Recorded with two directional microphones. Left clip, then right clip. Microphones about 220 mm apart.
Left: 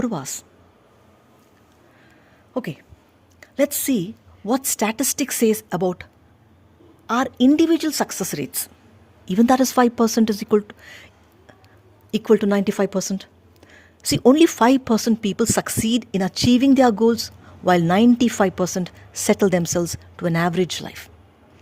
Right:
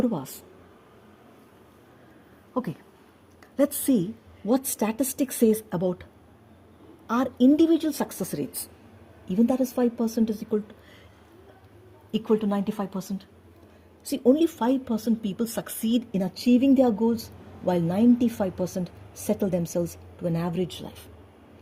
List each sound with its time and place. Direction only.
0.0 s a woman's voice: 30° left (ahead or behind)
2.5 s a woman's voice: 20° left (ahead or behind)
7.1 s a woman's voice: 25° left (ahead or behind)
12.1 s a woman's voice: 35° left (ahead or behind)